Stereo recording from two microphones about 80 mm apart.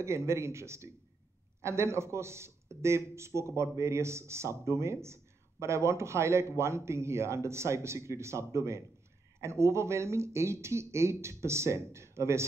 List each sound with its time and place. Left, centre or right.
0.0 s a man's voice: right